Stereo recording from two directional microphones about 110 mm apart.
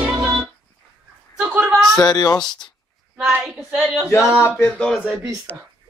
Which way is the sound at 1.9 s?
35° left (ahead or behind).